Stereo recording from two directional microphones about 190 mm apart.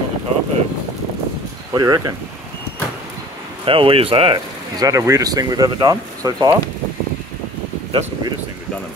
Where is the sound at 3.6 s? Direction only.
30° right (ahead or behind).